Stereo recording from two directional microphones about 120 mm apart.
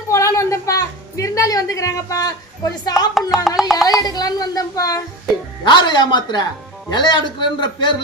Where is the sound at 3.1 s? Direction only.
Centre (ahead or behind).